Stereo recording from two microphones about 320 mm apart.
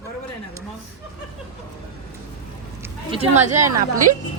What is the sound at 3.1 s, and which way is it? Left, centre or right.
Speech, centre.